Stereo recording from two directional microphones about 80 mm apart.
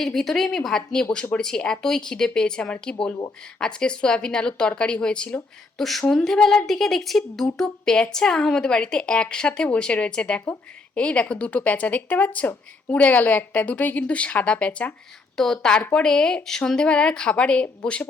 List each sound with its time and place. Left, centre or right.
0.0 s a woman's voice: centre